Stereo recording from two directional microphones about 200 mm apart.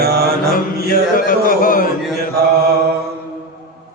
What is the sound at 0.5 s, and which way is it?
Music, 45° left (ahead or behind).